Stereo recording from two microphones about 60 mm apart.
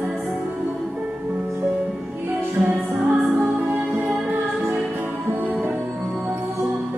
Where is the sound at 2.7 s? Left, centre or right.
Centre.